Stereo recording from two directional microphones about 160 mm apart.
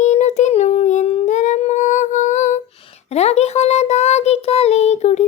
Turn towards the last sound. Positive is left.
turn(degrees=45)  # may be behind; listen again after turning